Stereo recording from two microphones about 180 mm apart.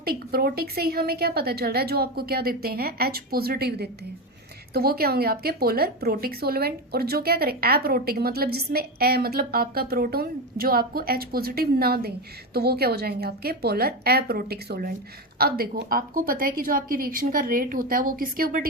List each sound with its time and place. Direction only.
0.0 s a woman's voice: 55° right (ahead or behind)